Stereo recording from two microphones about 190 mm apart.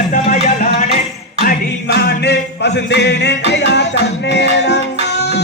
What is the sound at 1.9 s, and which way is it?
Music, 60° left (ahead or behind).